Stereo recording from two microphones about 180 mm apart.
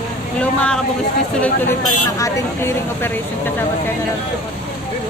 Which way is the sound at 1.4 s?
15° left (ahead or behind).